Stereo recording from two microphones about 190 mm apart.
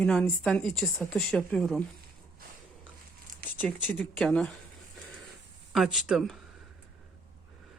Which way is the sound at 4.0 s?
5° left (ahead or behind).